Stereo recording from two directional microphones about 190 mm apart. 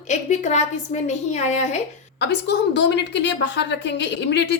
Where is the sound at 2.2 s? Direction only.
65° left (ahead or behind).